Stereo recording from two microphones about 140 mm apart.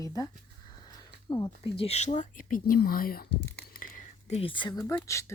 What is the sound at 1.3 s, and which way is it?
Speech, 35° left (ahead or behind).